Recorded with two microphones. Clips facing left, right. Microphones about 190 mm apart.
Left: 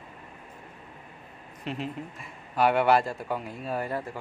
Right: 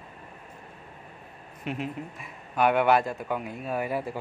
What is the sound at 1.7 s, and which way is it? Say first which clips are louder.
A man's voice: right 1 dB; 5° right (ahead or behind).